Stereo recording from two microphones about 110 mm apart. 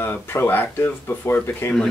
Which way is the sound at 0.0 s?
20° left (ahead or behind).